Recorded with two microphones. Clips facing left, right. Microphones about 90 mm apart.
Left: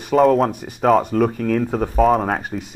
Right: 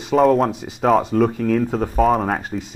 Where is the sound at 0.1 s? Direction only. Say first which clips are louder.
Left 1 dB; centre (ahead or behind).